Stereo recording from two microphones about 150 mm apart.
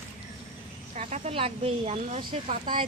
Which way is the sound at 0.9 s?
50° right (ahead or behind).